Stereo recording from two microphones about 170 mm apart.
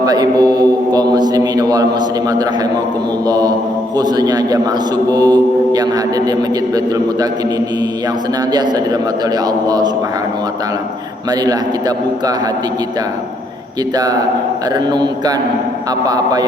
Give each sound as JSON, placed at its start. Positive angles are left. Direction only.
{"t": 0.0, "sound": "a man's voice", "side_deg": -25}
{"t": 3.2, "sound": "mantra", "side_deg": -20}
{"t": 8.5, "sound": "mantra", "side_deg": -25}
{"t": 13.9, "sound": "mantra", "side_deg": -20}